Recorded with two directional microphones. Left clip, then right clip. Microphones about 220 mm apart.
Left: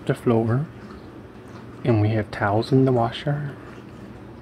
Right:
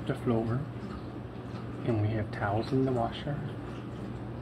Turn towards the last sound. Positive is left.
turn(degrees=50)  # may be behind; listen again after turning